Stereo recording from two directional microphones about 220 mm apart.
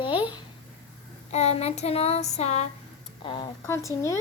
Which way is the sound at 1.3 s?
30° left (ahead or behind).